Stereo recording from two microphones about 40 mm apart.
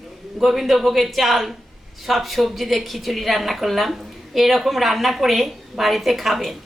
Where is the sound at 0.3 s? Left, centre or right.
Centre.